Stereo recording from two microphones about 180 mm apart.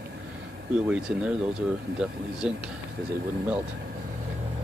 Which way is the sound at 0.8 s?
5° right (ahead or behind).